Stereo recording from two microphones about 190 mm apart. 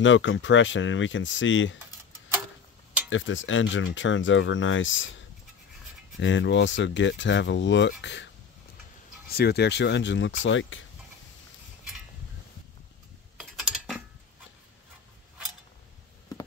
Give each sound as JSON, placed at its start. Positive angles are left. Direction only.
{"t": 0.0, "sound": "speech", "side_deg": 80}
{"t": 3.1, "sound": "speech", "side_deg": 85}
{"t": 6.1, "sound": "speech", "side_deg": 70}
{"t": 9.3, "sound": "speech", "side_deg": 55}
{"t": 13.4, "sound": "typing", "side_deg": -5}